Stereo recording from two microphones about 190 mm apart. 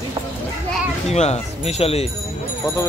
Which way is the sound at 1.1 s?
35° left (ahead or behind).